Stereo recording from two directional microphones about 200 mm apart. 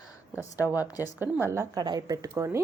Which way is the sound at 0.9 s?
15° left (ahead or behind).